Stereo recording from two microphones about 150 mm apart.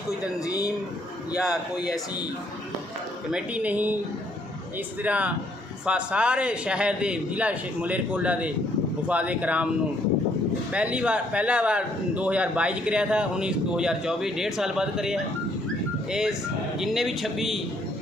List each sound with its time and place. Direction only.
0.1 s speech: 20° left (ahead or behind)
1.4 s a man's voice: 5° right (ahead or behind)
3.3 s speech: 10° right (ahead or behind)
5.0 s speech: 10° right (ahead or behind)
10.7 s a man's voice: 10° right (ahead or behind)